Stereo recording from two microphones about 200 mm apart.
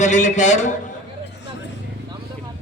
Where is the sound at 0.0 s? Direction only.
35° left (ahead or behind).